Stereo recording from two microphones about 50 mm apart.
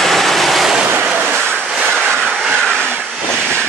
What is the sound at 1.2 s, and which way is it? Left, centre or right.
Vehicle, centre.